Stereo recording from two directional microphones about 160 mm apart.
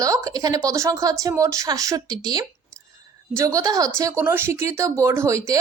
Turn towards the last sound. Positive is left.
turn(degrees=-20)  # may be behind; listen again after turning